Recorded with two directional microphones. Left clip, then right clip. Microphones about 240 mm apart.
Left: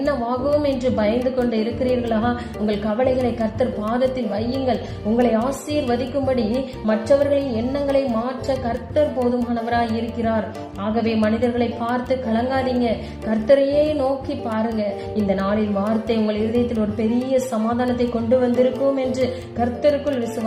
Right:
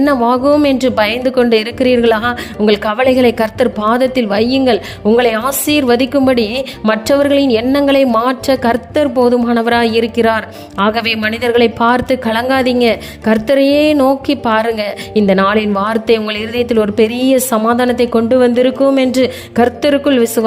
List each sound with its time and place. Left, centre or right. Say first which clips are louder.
0.0 s speech: right 10 dB; right